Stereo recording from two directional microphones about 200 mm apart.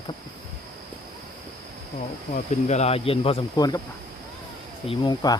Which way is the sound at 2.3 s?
35° left (ahead or behind).